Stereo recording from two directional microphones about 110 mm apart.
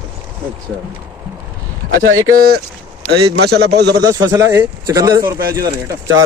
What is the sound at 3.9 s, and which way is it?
A man's voice, 30° right (ahead or behind).